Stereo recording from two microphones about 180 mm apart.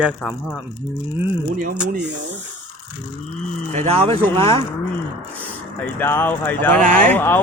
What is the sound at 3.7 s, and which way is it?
Speech, 35° right (ahead or behind).